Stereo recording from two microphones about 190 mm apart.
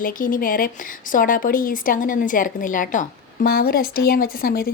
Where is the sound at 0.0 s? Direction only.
45° left (ahead or behind).